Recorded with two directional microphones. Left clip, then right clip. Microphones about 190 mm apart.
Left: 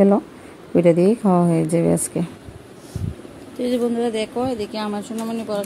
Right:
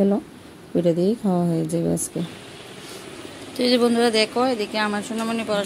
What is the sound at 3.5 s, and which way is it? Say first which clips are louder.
A woman's voice: right 3 dB; 5° left (ahead or behind).